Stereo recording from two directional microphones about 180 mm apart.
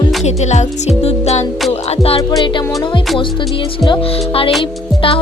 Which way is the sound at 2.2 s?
20° left (ahead or behind).